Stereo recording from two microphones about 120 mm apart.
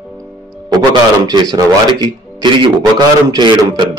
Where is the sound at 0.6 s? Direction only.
35° right (ahead or behind).